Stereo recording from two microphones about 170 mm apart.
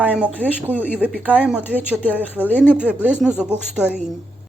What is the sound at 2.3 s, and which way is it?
Speech, 10° left (ahead or behind).